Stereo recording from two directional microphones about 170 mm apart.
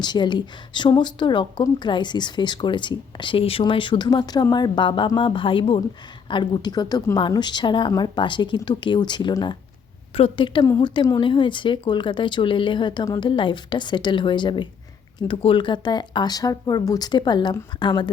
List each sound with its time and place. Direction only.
0.0 s a woman's voice: 25° left (ahead or behind)